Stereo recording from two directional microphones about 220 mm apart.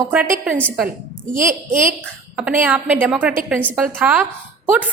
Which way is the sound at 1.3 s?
35° right (ahead or behind).